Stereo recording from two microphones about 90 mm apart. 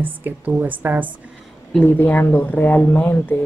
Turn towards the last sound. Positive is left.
turn(degrees=20)  # may be behind; listen again after turning